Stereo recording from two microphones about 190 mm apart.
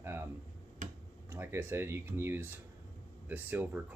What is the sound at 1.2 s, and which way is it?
Speech, 15° right (ahead or behind).